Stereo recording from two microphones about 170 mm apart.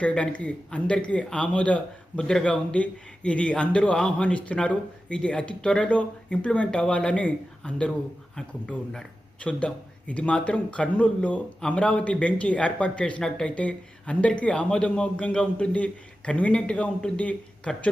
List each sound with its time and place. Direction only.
0.0 s a man's voice: 5° left (ahead or behind)